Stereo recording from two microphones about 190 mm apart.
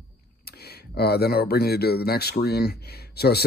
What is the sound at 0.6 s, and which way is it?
Speech, 55° left (ahead or behind).